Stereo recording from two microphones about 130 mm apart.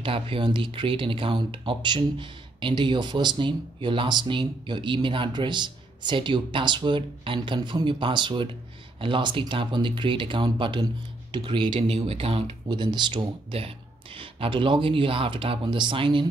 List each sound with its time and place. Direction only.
0.0 s speech: 40° right (ahead or behind)
12.1 s speech: 50° right (ahead or behind)